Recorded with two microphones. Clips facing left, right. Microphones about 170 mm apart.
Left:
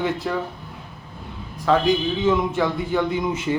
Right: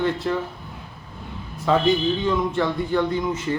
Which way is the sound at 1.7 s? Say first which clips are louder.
Even; centre (ahead or behind).